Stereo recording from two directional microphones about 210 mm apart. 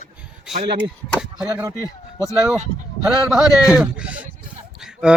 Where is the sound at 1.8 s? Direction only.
15° left (ahead or behind).